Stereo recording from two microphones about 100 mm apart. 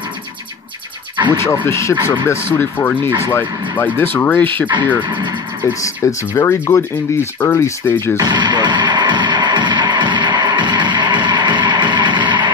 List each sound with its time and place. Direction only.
1.3 s speech: 25° left (ahead or behind)
5.8 s speech: 30° left (ahead or behind)
8.3 s music: 50° right (ahead or behind)